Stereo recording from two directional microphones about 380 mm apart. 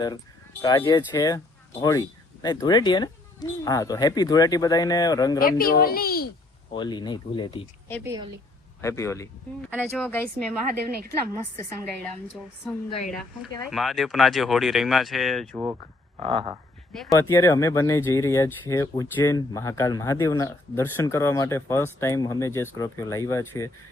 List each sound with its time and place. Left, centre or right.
0.6 s speech: centre
5.4 s a child's voice: left
6.7 s speech: centre
10.7 s a woman's voice: right
12.9 s speech: centre
13.1 s speech: centre
16.2 s a sound: centre
16.9 s speech: centre